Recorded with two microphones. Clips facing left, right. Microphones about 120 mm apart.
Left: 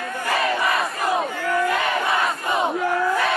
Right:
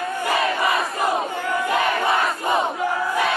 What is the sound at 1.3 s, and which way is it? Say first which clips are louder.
Crowd: left 1 dB; 25° right (ahead or behind).